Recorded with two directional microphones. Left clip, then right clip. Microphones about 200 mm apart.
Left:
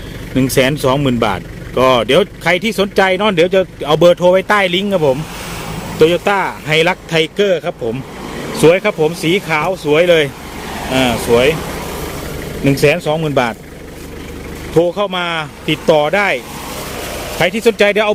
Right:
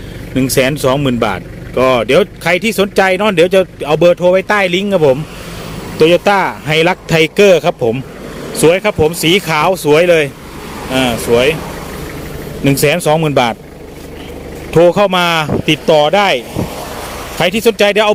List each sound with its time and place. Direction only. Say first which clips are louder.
0.3 s a man's voice: right 1 dB; 5° right (ahead or behind); by 7.9 s 20° right (ahead or behind)
8.6 s speech: right 1 dB; centre (ahead or behind)
12.6 s speech: right 1 dB; 10° right (ahead or behind)
14.8 s a man's voice: right 5 dB; 30° right (ahead or behind)
15.9 s speech: right 2 dB; 10° right (ahead or behind)
17.4 s speech: right 1 dB; 15° right (ahead or behind)